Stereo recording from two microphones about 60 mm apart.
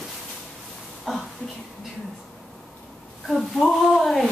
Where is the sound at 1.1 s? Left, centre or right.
Centre.